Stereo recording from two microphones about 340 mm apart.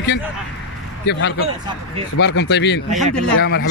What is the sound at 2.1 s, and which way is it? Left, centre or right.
Speech, left.